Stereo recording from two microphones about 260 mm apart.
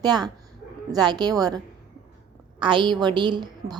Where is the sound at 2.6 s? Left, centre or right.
Centre.